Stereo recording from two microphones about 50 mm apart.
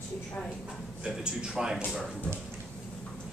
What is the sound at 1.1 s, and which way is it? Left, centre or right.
Speech, centre.